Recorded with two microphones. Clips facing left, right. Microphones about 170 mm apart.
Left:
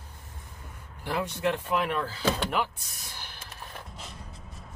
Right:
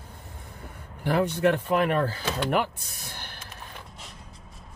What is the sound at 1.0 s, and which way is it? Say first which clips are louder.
Speech: right 6 dB; 55° right (ahead or behind).